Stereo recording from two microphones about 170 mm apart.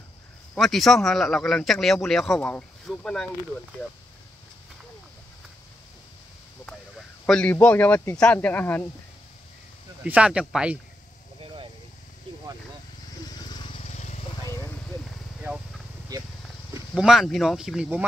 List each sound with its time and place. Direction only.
0.6 s speech: centre (ahead or behind)
7.2 s speech: 5° left (ahead or behind)
10.0 s speech: 10° right (ahead or behind)
13.3 s vehicle: 25° left (ahead or behind)
13.8 s vehicle: 45° left (ahead or behind)
14.4 s vehicle: 15° left (ahead or behind)
16.9 s speech: centre (ahead or behind)